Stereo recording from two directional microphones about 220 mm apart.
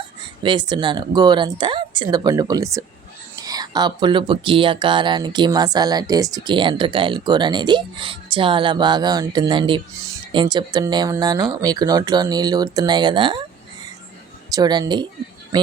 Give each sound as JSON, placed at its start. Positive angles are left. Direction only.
{"t": 0.4, "sound": "speech", "side_deg": -20}
{"t": 14.5, "sound": "speech", "side_deg": -20}